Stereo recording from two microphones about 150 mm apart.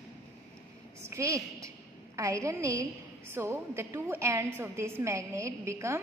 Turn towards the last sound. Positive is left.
turn(degrees=-20)  # may be behind; listen again after turning